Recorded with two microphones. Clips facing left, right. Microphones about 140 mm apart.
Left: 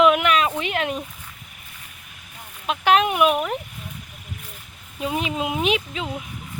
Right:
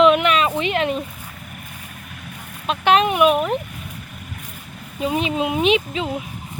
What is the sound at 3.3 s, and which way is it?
Speech, 25° right (ahead or behind).